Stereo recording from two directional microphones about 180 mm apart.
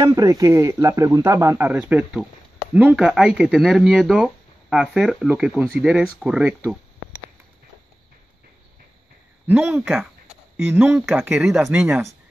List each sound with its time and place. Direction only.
0.0 s speech: 20° right (ahead or behind)
9.5 s speech: 10° right (ahead or behind)